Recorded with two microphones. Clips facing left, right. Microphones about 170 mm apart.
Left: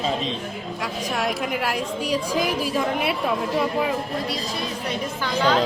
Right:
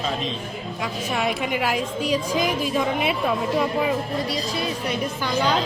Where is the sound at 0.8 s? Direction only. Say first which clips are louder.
Right 1 dB; centre (ahead or behind).